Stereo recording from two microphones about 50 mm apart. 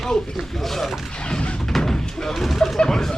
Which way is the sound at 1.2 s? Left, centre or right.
Centre.